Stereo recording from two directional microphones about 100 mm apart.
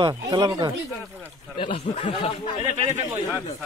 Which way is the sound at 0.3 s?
40° right (ahead or behind).